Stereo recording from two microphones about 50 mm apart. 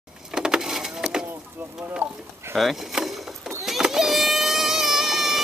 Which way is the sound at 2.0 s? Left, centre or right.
Right.